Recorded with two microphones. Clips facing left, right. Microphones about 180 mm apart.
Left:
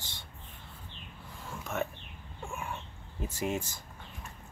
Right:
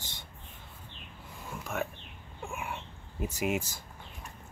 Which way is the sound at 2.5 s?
15° right (ahead or behind).